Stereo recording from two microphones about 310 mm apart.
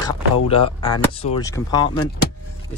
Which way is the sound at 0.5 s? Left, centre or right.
Centre.